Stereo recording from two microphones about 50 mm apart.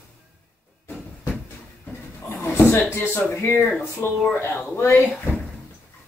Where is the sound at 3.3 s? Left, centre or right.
Left.